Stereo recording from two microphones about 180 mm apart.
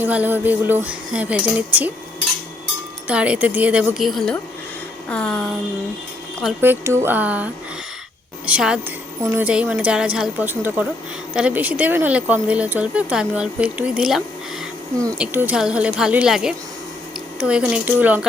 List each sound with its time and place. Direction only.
0.0 s speech: 10° right (ahead or behind)
3.1 s speech: 5° right (ahead or behind)
6.6 s speech: 15° right (ahead or behind)
15.2 s speech: 10° right (ahead or behind)